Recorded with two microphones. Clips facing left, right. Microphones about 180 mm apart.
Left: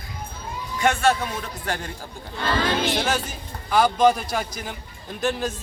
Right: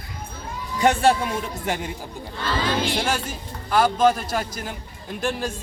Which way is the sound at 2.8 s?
10° right (ahead or behind).